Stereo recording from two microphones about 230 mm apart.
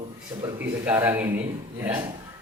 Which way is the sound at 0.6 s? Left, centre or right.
Centre.